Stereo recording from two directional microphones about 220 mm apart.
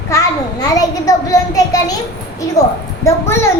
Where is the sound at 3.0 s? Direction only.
10° left (ahead or behind).